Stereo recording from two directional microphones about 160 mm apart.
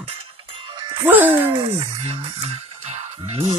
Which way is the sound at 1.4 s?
35° right (ahead or behind).